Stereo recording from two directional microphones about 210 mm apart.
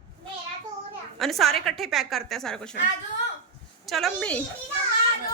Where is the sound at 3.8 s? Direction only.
Centre (ahead or behind).